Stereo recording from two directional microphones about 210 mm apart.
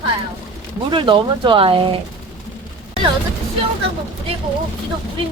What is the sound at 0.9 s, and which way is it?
Speech, 20° right (ahead or behind).